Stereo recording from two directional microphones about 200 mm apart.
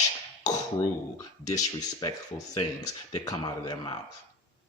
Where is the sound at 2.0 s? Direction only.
20° left (ahead or behind).